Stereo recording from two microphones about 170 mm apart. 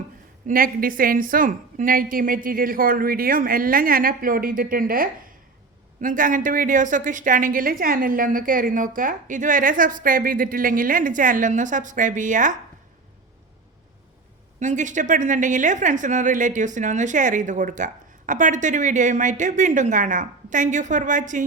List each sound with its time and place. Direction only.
0.4 s a woman's voice: 55° right (ahead or behind)
14.6 s a woman's voice: 45° right (ahead or behind)